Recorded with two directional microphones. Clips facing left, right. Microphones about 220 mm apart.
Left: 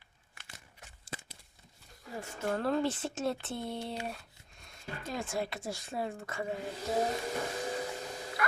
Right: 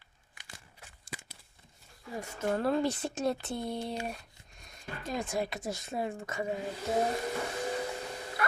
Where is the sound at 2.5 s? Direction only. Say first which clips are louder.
Right 1 dB; 10° right (ahead or behind).